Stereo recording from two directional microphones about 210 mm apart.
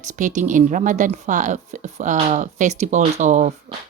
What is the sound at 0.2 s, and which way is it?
Speech, 35° right (ahead or behind).